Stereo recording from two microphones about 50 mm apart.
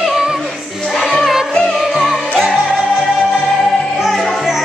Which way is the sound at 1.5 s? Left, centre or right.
Centre.